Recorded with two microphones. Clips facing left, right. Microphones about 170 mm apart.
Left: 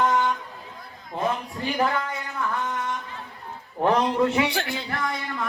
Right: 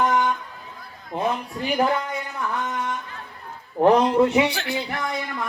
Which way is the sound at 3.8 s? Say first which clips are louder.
Right 4 dB; 20° right (ahead or behind).